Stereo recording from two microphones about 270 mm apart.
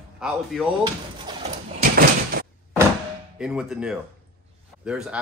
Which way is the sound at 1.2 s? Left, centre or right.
Right.